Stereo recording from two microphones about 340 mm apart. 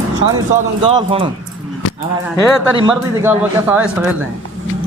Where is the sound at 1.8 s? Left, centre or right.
Left.